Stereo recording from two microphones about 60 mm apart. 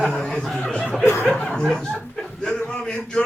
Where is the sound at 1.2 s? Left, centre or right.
Centre.